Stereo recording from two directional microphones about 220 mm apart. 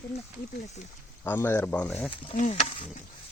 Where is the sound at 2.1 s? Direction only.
30° left (ahead or behind).